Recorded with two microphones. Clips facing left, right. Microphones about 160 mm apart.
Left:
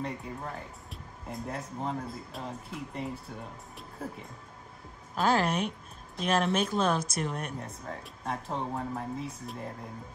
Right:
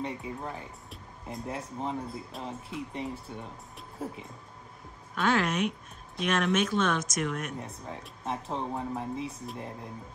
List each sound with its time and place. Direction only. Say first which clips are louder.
0.0 s speech: right 1 dB; centre (ahead or behind)
5.1 s a woman's voice: left 1 dB; 35° left (ahead or behind)
7.5 s speech: even; centre (ahead or behind)